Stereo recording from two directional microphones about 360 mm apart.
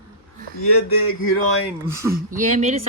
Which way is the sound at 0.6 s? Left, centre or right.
Left.